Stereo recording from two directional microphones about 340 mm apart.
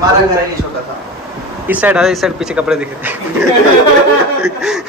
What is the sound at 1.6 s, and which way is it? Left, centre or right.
Speech, centre.